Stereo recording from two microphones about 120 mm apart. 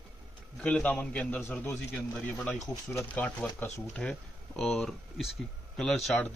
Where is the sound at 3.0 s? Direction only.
10° left (ahead or behind).